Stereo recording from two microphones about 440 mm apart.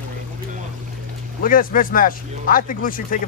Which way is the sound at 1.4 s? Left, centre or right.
Centre.